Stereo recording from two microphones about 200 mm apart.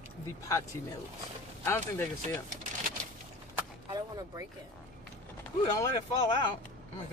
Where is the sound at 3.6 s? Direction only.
20° right (ahead or behind).